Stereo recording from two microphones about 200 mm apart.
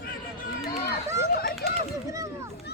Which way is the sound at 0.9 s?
50° left (ahead or behind).